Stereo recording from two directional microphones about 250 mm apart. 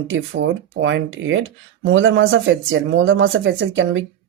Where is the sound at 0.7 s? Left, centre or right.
Right.